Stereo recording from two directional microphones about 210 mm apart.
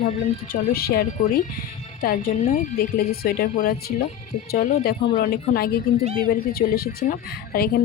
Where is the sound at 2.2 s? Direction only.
35° left (ahead or behind).